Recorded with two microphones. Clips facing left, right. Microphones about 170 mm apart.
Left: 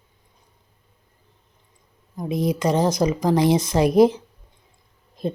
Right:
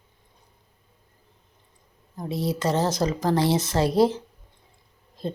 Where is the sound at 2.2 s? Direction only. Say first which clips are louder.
Left 4 dB; 15° left (ahead or behind).